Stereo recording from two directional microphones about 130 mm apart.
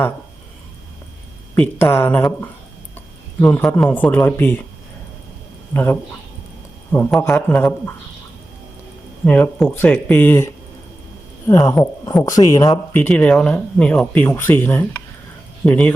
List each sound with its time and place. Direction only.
1.5 s speech: 15° left (ahead or behind)
3.4 s speech: 15° left (ahead or behind)
5.7 s speech: 15° left (ahead or behind)
9.2 s speech: 10° left (ahead or behind); by 12.8 s 30° left (ahead or behind)
12.9 s speech: 10° left (ahead or behind)